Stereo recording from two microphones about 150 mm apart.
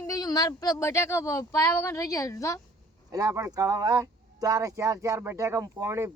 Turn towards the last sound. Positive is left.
turn(degrees=-20)  # may be behind; listen again after turning